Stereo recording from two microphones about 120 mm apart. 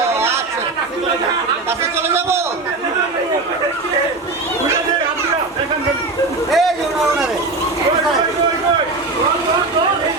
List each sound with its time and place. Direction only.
0.1 s chatter: 20° right (ahead or behind)
2.0 s a man's voice: 20° right (ahead or behind)
6.5 s a sound: centre (ahead or behind)